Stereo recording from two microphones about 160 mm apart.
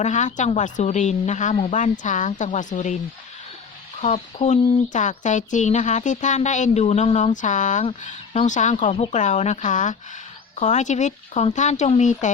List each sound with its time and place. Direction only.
0.0 s speech: 50° left (ahead or behind)
4.0 s speech: 45° left (ahead or behind)